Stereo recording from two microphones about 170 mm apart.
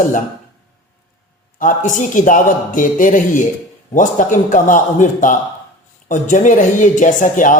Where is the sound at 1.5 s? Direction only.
50° left (ahead or behind).